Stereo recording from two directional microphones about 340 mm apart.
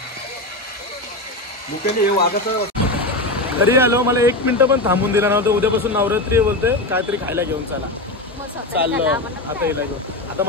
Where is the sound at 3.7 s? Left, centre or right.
Centre.